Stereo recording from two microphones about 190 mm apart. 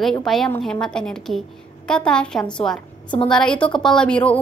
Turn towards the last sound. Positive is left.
turn(degrees=5)  # may be behind; listen again after turning